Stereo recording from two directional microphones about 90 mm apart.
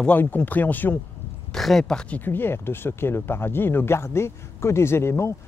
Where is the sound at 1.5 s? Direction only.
5° left (ahead or behind).